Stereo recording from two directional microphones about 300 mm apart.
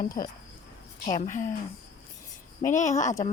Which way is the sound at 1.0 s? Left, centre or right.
Left.